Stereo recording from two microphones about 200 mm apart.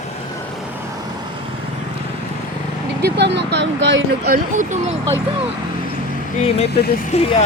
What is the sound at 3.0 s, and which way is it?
Speech, 60° right (ahead or behind).